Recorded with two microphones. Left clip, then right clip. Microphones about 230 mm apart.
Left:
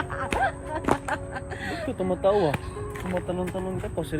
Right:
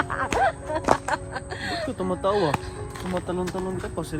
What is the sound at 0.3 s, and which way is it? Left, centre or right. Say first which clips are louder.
Music: right 3 dB; right.